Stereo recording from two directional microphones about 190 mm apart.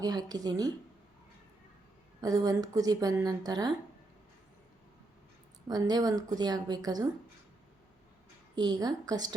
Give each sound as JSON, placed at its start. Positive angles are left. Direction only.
{"t": 0.0, "sound": "a woman's voice", "side_deg": -20}
{"t": 2.2, "sound": "a woman's voice", "side_deg": -20}
{"t": 5.6, "sound": "a woman's voice", "side_deg": -20}
{"t": 8.5, "sound": "a woman's voice", "side_deg": -20}